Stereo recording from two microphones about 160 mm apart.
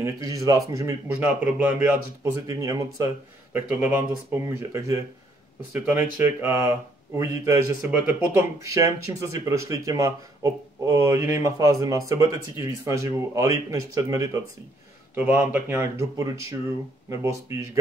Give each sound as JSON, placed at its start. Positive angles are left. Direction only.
{"t": 0.0, "sound": "speech", "side_deg": -20}
{"t": 2.4, "sound": "speech", "side_deg": -20}